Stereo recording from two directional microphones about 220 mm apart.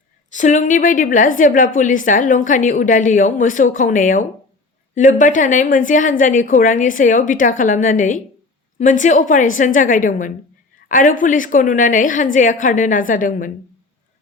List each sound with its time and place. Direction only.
0.3 s a woman's voice: 35° left (ahead or behind)